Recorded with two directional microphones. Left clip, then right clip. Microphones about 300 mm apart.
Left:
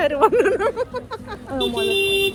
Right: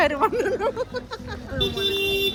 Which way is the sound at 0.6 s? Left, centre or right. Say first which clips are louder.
Left 3 dB; left.